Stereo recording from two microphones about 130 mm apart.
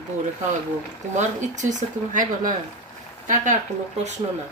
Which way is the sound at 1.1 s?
70° right (ahead or behind).